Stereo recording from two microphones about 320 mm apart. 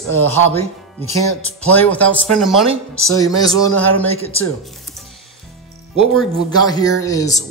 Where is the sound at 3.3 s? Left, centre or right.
Centre.